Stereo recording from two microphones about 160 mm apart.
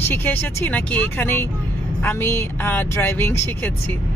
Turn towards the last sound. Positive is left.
turn(degrees=15)  # may be behind; listen again after turning